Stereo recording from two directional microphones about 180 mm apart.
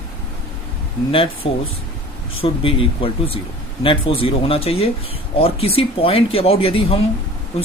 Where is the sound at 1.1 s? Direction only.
30° left (ahead or behind).